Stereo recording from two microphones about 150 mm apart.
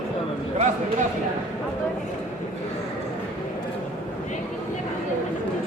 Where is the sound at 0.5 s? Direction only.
55° right (ahead or behind).